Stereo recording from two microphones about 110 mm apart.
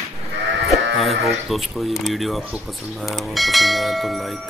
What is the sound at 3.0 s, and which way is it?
Speech, centre (ahead or behind).